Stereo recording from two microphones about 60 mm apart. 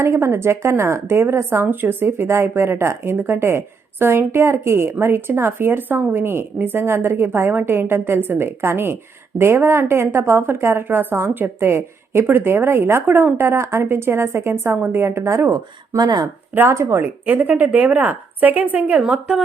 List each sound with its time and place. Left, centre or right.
0.0 s a woman's voice: right
13.1 s a woman's voice: right
16.6 s speech: right